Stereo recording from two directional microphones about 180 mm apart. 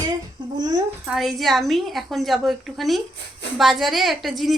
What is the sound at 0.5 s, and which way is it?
Speech, 20° right (ahead or behind).